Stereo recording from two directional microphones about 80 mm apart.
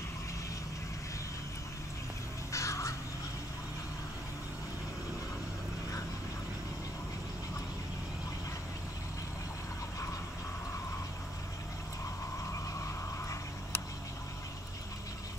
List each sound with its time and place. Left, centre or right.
2.5 s crow: left